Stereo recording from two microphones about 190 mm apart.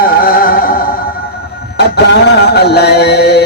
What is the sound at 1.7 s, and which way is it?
Music, 60° left (ahead or behind).